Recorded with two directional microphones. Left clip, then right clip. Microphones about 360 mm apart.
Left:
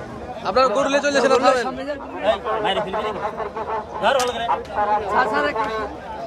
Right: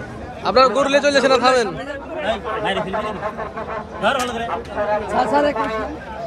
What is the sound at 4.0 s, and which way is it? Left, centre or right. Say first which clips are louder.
Speech: even; left.